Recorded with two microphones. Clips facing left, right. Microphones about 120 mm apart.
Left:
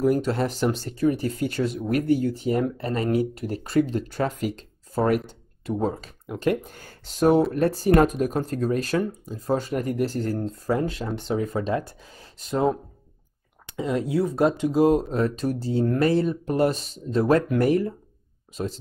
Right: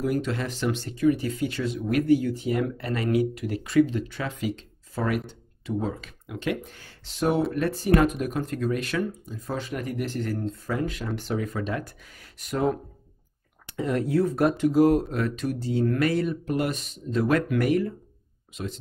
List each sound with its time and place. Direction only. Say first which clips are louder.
0.0 s speech: left 5 dB; 40° left (ahead or behind)
13.7 s speech: even; 15° left (ahead or behind); by 18.7 s 35° left (ahead or behind)